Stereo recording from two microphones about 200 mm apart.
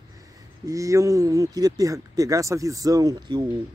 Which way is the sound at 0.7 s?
15° right (ahead or behind).